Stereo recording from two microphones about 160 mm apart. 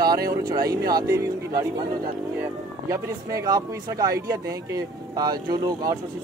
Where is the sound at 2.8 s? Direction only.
20° right (ahead or behind).